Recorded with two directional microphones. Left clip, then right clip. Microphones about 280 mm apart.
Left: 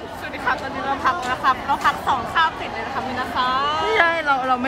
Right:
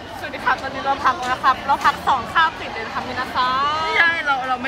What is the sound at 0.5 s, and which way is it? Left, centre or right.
Speech, centre.